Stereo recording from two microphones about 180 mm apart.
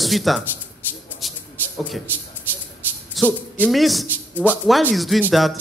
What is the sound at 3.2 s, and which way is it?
A man's voice, centre (ahead or behind).